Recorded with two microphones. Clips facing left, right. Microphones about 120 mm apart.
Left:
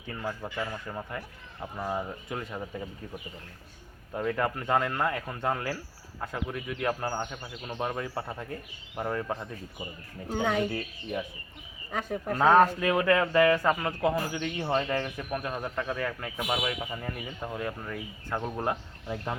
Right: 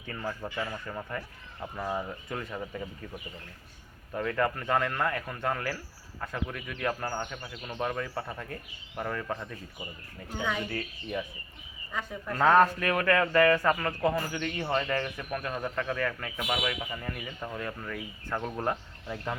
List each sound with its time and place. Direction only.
0.0 s a man's voice: 10° left (ahead or behind)
4.1 s a man's voice: 15° left (ahead or behind)
11.9 s speech: 70° left (ahead or behind)
12.3 s a man's voice: 15° left (ahead or behind)